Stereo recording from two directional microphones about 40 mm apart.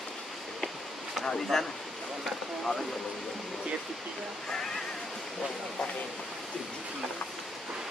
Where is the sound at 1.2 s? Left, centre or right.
Centre.